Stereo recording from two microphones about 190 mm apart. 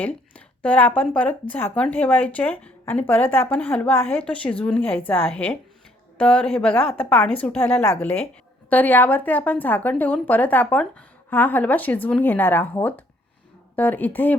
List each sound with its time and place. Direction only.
0.0 s speech: 5° left (ahead or behind)